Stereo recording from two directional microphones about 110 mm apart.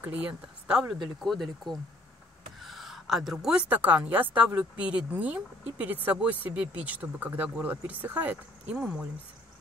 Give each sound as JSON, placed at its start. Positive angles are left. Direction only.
{"t": 0.0, "sound": "a woman's voice", "side_deg": -15}